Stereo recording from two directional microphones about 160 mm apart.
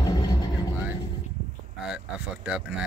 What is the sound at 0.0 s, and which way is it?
Vehicle, 25° left (ahead or behind).